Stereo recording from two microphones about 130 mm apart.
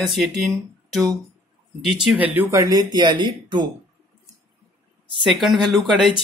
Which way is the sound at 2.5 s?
30° right (ahead or behind).